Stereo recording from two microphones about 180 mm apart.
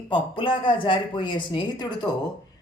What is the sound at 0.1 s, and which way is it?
Speech, 25° left (ahead or behind).